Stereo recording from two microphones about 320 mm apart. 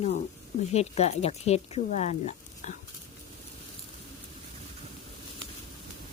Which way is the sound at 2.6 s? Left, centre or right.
Left.